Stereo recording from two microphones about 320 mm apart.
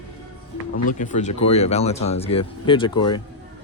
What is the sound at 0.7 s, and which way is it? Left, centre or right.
Speech, left.